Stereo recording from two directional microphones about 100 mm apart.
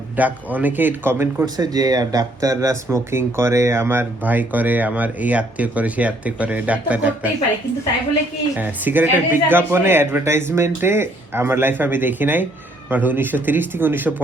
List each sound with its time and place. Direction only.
0.2 s speech: 15° right (ahead or behind)
1.5 s speech: 40° right (ahead or behind); by 7.3 s 15° right (ahead or behind)
8.5 s speech: 15° right (ahead or behind)